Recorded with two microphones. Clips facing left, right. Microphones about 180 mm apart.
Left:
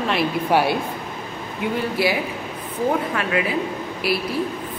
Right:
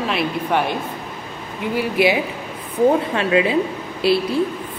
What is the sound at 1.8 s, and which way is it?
A woman's voice, 20° right (ahead or behind).